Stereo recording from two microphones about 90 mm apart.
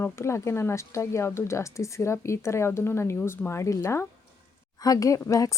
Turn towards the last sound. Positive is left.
turn(degrees=40)  # may be behind; listen again after turning